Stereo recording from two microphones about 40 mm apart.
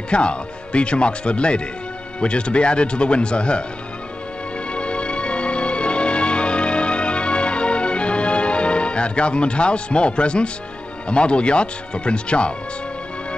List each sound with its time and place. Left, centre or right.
0.1 s speech: left
4.7 s music: left
11.1 s speech: left